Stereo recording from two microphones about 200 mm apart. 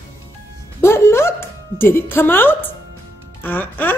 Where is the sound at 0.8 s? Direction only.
10° left (ahead or behind).